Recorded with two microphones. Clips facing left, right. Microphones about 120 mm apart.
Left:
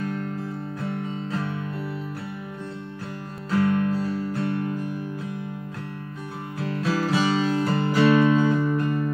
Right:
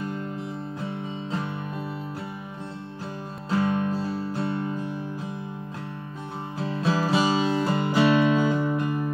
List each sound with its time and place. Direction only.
3.4 s music: 25° right (ahead or behind)
6.6 s music: 25° right (ahead or behind)